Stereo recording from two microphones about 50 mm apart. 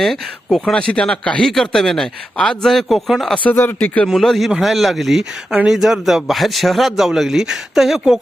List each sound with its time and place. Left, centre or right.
0.0 s speech: centre
0.6 s speech: centre
1.5 s speech: centre
3.5 s speech: left
4.1 s speech: centre